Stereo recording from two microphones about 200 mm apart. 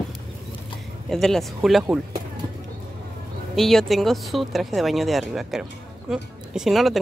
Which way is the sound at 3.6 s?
Centre (ahead or behind).